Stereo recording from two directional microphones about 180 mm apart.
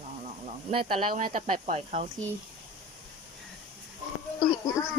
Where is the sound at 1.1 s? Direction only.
50° right (ahead or behind).